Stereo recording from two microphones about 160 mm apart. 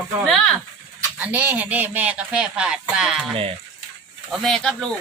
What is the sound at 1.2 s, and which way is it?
Speech, 10° right (ahead or behind).